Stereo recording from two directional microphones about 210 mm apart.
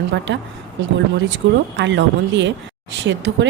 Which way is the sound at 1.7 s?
60° right (ahead or behind).